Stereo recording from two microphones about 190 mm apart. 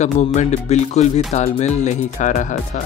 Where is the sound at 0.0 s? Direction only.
40° left (ahead or behind).